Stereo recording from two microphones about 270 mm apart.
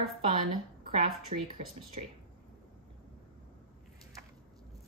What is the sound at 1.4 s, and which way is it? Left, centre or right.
Speech, right.